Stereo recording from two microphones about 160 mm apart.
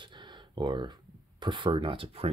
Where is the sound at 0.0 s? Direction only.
30° right (ahead or behind).